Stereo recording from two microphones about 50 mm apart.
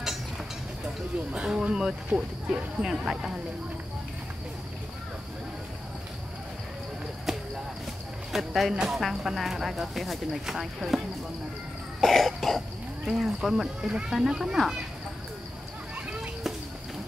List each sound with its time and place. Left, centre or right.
1.3 s speech: centre
7.3 s basketball bounce: centre
8.3 s speech: centre
12.0 s cough: centre
13.0 s speech: centre
13.8 s speech: centre